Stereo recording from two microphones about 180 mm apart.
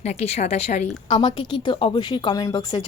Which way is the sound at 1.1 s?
25° left (ahead or behind).